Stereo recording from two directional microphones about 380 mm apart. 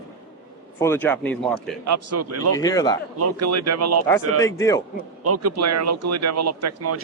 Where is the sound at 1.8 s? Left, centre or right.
Right.